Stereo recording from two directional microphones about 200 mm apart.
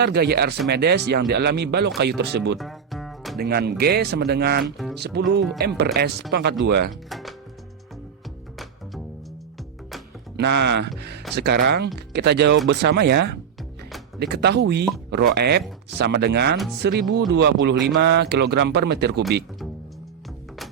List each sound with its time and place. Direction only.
0.0 s speech: 55° right (ahead or behind)
2.6 s music: centre (ahead or behind)
3.3 s speech: 50° right (ahead or behind)
4.6 s speech: centre (ahead or behind)
4.9 s speech: 55° right (ahead or behind)
7.1 s music: centre (ahead or behind)
10.3 s speech: 60° right (ahead or behind)